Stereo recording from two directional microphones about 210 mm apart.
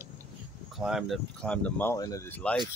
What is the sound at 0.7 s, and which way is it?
Speech, centre (ahead or behind).